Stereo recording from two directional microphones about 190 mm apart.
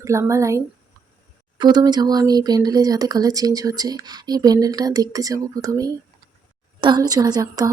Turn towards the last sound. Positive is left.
turn(degrees=-20)  # may be behind; listen again after turning